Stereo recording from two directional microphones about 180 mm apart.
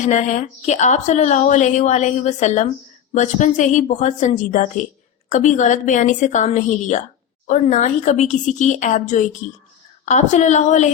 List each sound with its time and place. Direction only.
0.0 s a woman's voice: 40° left (ahead or behind)